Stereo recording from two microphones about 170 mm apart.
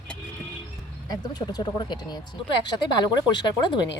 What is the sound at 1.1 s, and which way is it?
Speech, 25° left (ahead or behind).